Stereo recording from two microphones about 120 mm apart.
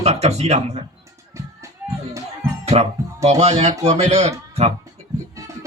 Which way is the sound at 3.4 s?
65° right (ahead or behind).